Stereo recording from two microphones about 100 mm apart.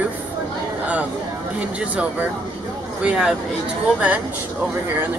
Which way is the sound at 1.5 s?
15° right (ahead or behind).